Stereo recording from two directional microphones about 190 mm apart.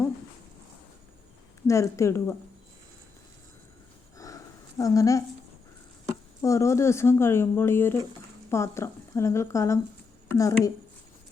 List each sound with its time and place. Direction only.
1.6 s speech: 15° left (ahead or behind)
4.8 s speech: 15° left (ahead or behind)
6.4 s a woman's voice: 15° left (ahead or behind)